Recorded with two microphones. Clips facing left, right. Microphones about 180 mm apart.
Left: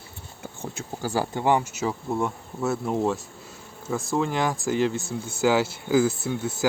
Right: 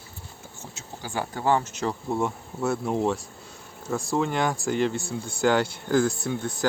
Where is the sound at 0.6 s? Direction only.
55° left (ahead or behind).